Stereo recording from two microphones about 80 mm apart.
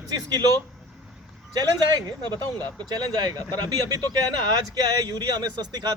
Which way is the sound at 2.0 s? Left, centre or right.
Right.